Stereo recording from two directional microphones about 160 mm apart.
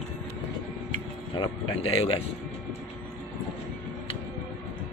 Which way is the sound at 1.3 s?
35° left (ahead or behind).